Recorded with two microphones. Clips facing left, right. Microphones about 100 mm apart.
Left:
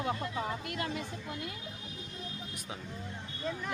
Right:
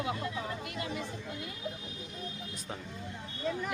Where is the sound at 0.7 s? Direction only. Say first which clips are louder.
Left 2 dB; 55° left (ahead or behind).